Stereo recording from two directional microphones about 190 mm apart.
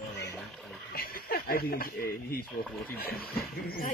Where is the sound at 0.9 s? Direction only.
50° left (ahead or behind).